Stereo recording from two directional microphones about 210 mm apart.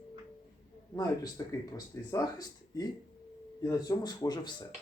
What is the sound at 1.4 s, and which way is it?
Speech, 15° left (ahead or behind).